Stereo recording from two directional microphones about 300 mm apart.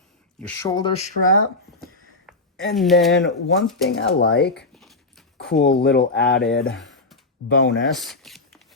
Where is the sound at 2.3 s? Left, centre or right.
Centre.